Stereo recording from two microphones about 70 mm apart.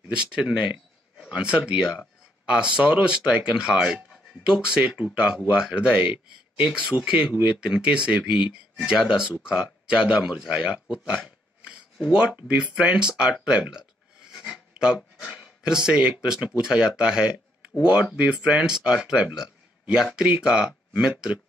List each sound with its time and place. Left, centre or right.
0.1 s speech: centre
15.0 s speech: centre
15.6 s speech: centre